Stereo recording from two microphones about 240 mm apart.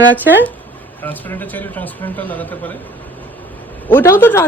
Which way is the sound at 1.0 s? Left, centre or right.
Centre.